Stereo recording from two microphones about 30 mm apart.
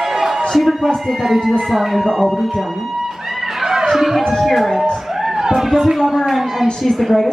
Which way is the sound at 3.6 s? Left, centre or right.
Centre.